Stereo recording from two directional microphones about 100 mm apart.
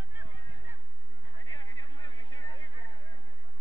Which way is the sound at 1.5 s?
50° left (ahead or behind).